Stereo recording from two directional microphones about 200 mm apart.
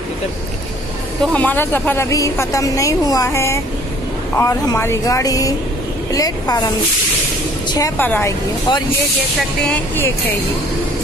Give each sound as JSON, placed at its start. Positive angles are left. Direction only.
{"t": 1.2, "sound": "a woman's voice", "side_deg": 5}
{"t": 7.7, "sound": "speech", "side_deg": 15}